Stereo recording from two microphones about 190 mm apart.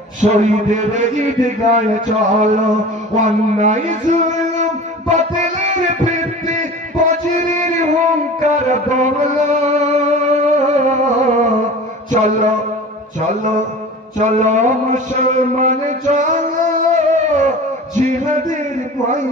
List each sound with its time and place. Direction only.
0.2 s a man's voice: 40° right (ahead or behind)
3.2 s a sound: 40° right (ahead or behind)
12.1 s a man's voice: 40° right (ahead or behind)
14.1 s mantra: 40° right (ahead or behind)
17.9 s speech: 40° right (ahead or behind)